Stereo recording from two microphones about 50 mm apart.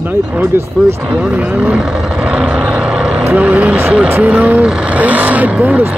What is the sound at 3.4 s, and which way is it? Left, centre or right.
Speech, right.